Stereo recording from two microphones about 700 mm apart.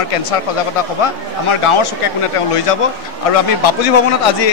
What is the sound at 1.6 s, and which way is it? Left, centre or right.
Speech, left.